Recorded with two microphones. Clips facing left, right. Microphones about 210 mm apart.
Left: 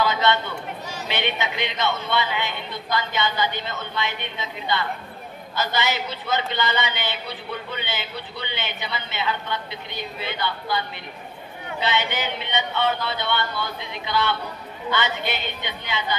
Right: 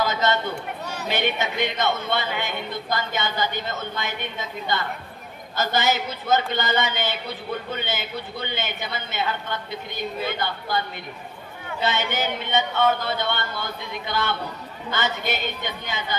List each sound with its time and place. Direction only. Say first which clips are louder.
0.0 s a woman's voice: left 1 dB; 45° right (ahead or behind)
11.8 s a woman's voice: right 1 dB; 45° right (ahead or behind)